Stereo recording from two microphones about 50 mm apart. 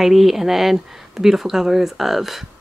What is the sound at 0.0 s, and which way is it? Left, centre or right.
Speech, centre.